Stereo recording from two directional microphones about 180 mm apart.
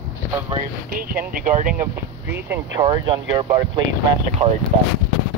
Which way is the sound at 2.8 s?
25° right (ahead or behind).